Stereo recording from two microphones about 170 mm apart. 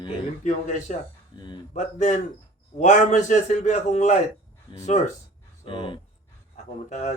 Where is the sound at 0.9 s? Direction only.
50° left (ahead or behind).